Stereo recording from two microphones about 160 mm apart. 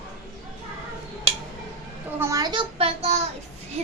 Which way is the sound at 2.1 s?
20° right (ahead or behind).